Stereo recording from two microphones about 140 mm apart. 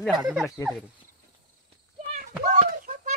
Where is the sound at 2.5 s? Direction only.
65° right (ahead or behind).